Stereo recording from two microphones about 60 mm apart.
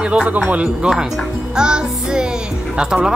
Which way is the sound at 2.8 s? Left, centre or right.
Centre.